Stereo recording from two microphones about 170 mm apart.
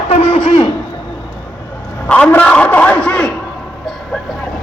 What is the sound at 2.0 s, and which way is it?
A man's voice, 5° left (ahead or behind).